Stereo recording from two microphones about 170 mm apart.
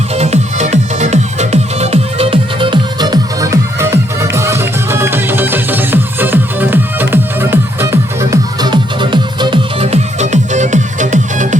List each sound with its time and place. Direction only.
0.1 s music: 40° right (ahead or behind)